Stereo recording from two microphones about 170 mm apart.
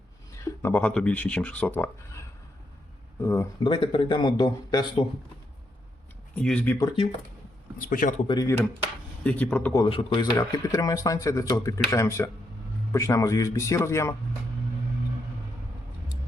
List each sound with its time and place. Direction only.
0.4 s speech: 10° left (ahead or behind)
3.6 s speech: 30° left (ahead or behind)
6.3 s speech: 5° left (ahead or behind)
6.7 s speech: 20° left (ahead or behind)
7.8 s speech: 55° left (ahead or behind)
8.3 s speech: 20° left (ahead or behind)
9.2 s speech: 10° left (ahead or behind)
9.7 s speech: 30° left (ahead or behind)